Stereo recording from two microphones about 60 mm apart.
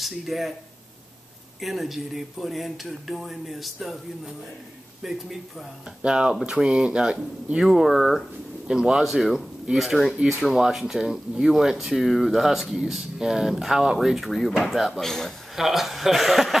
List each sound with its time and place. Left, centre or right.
0.0 s speech: centre
1.6 s speech: centre
5.0 s speech: centre
6.0 s speech: centre
8.6 s speech: centre
15.0 s a man's voice: centre
15.5 s speech: centre